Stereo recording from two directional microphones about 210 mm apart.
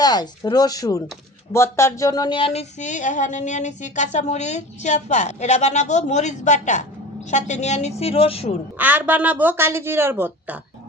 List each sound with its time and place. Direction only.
0.0 s speech: 20° left (ahead or behind)
1.5 s a sound: 10° left (ahead or behind); by 8.5 s 30° left (ahead or behind)
8.8 s speech: 10° right (ahead or behind)